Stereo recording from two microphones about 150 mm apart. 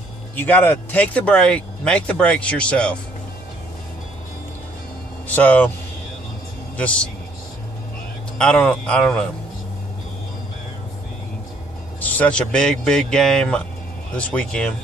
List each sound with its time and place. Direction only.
0.4 s speech: 10° left (ahead or behind)
5.3 s speech: 10° left (ahead or behind)
6.8 s speech: 10° left (ahead or behind)
8.4 s speech: 5° left (ahead or behind)
12.0 s a man's voice: 10° left (ahead or behind)